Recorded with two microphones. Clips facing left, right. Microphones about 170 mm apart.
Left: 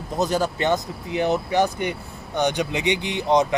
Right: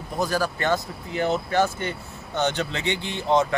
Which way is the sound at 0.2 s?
20° left (ahead or behind).